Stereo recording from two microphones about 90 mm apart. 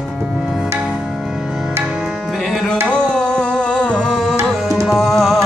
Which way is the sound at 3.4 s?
10° left (ahead or behind).